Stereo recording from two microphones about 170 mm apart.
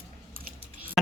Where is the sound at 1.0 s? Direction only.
Centre (ahead or behind).